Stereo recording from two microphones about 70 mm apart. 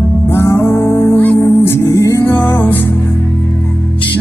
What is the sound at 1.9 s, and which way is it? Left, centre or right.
Music, left.